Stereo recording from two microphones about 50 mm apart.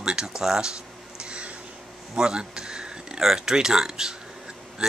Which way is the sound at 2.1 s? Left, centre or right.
Centre.